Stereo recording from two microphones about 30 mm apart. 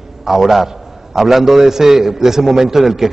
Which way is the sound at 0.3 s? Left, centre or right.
Centre.